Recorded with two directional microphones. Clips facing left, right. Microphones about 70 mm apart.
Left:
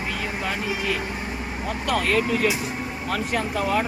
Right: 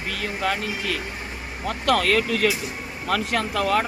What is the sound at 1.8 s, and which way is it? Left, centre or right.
Speech, right.